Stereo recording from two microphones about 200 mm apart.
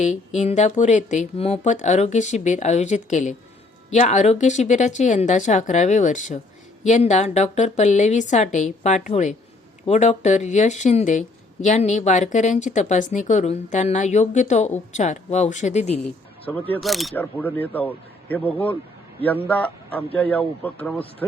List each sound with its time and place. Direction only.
0.3 s speech: 35° left (ahead or behind)
16.0 s a man's voice: 10° left (ahead or behind)